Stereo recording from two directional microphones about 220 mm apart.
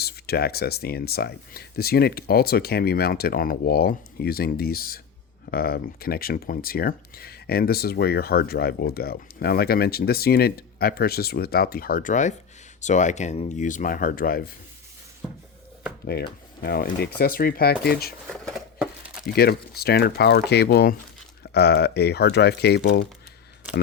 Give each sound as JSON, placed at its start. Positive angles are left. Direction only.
{"t": 0.0, "sound": "speech", "side_deg": 45}
{"t": 16.0, "sound": "speech", "side_deg": 45}
{"t": 18.3, "sound": "a sound", "side_deg": 0}
{"t": 19.4, "sound": "speech", "side_deg": 45}